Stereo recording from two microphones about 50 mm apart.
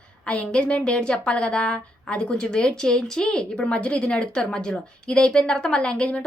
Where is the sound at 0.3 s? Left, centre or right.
Left.